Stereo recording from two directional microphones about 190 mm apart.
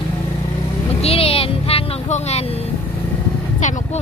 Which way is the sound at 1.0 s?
30° left (ahead or behind).